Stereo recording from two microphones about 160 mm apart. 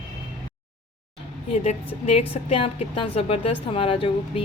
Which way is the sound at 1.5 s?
45° left (ahead or behind).